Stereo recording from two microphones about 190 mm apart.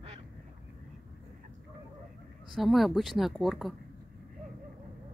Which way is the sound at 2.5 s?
Centre (ahead or behind).